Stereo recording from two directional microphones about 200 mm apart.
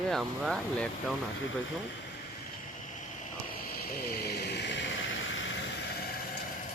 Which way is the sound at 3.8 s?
50° left (ahead or behind).